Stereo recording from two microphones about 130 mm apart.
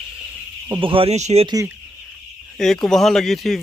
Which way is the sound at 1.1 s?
60° right (ahead or behind).